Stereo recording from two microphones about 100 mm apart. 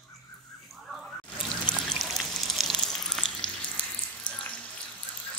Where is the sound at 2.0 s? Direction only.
Centre (ahead or behind).